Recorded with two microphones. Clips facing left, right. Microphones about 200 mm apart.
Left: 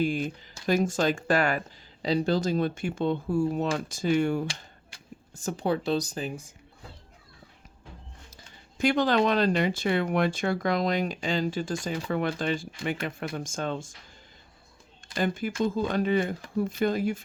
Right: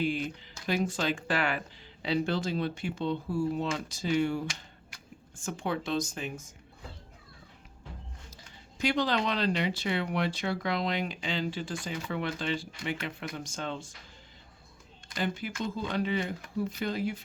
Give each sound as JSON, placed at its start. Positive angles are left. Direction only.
{"t": 0.0, "sound": "speech", "side_deg": 45}
{"t": 4.4, "sound": "speech", "side_deg": 35}
{"t": 8.8, "sound": "speech", "side_deg": 50}
{"t": 15.1, "sound": "speech", "side_deg": 50}